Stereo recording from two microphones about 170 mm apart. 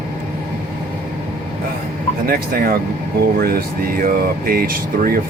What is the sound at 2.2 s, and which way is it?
Speech, 60° right (ahead or behind).